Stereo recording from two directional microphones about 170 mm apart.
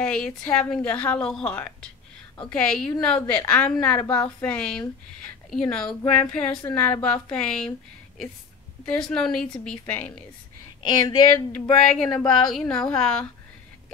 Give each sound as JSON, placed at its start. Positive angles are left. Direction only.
{"t": 0.0, "sound": "a woman's voice", "side_deg": 5}
{"t": 8.8, "sound": "a woman's voice", "side_deg": 5}
{"t": 10.8, "sound": "speech", "side_deg": 25}
{"t": 11.9, "sound": "a woman's voice", "side_deg": 5}